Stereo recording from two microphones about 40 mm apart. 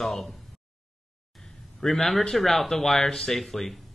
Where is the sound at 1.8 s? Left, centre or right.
Centre.